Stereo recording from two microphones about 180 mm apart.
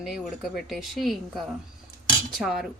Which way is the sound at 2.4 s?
Centre (ahead or behind).